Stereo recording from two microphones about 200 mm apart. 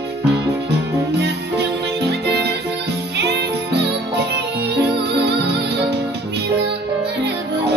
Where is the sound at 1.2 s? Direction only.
55° right (ahead or behind).